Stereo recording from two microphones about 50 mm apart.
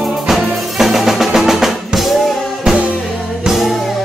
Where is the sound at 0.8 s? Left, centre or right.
Centre.